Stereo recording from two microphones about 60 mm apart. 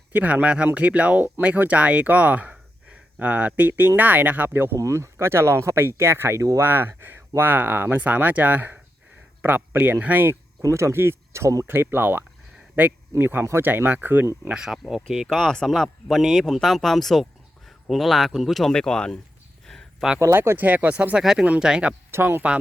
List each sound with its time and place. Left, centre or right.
0.1 s speech: right
0.4 s speech: centre; by 4.8 s right
4.8 s speech: right
10.6 s speech: right
11.6 s speech: right
13.7 s speech: right
14.5 s speech: centre
15.3 s speech: centre
18.7 s speech: centre
20.1 s speech: right
20.6 s speech: right
21.2 s speech: centre
22.1 s speech: right